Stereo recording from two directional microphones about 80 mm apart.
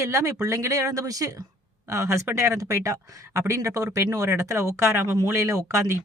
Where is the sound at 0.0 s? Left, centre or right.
Right.